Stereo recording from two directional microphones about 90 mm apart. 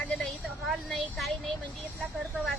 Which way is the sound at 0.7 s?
Centre (ahead or behind).